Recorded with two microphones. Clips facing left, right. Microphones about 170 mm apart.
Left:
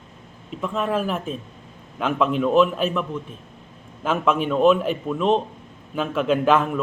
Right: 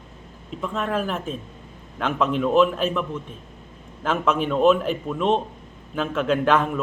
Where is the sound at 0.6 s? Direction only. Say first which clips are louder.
Left 2 dB; 5° left (ahead or behind).